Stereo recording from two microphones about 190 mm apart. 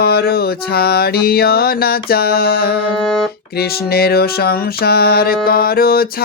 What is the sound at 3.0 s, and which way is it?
Speech, 5° left (ahead or behind).